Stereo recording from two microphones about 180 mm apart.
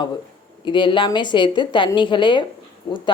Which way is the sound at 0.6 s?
25° left (ahead or behind).